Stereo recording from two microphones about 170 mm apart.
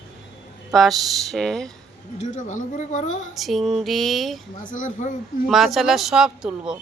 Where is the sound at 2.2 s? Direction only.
45° left (ahead or behind).